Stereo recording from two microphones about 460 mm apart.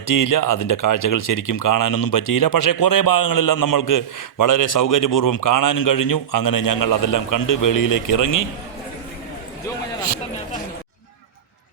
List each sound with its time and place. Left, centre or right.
0.1 s speech: left